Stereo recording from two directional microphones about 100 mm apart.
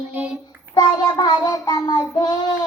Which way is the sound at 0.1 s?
15° right (ahead or behind).